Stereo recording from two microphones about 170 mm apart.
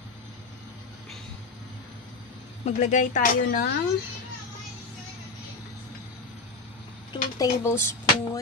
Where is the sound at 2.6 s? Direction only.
45° left (ahead or behind).